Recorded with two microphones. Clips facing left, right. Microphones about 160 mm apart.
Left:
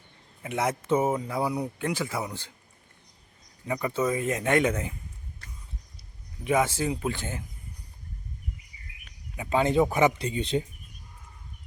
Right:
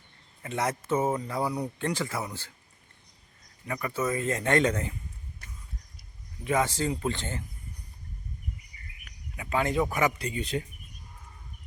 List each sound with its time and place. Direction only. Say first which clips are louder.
0.4 s speech: left 2 dB; 15° left (ahead or behind)
3.7 s speech: left 3 dB; 20° left (ahead or behind)
6.4 s speech: left 2 dB; 15° left (ahead or behind)
9.3 s speech: left 4 dB; 25° left (ahead or behind)